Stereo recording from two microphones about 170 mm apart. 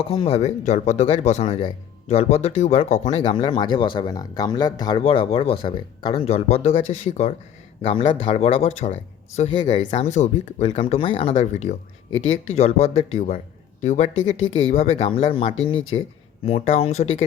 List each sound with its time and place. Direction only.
0.0 s speech: 35° left (ahead or behind)
3.2 s speech: 30° left (ahead or behind)
9.6 s speech: 25° left (ahead or behind)
10.0 s speech: 45° left (ahead or behind)